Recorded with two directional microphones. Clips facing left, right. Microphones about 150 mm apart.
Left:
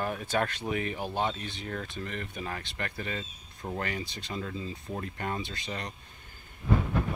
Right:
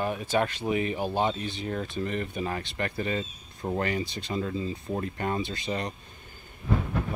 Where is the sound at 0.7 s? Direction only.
15° right (ahead or behind).